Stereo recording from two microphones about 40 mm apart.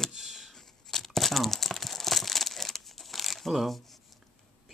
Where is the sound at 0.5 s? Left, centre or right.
Centre.